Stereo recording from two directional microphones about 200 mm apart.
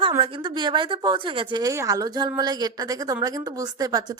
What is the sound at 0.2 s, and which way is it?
A woman's voice, 25° right (ahead or behind).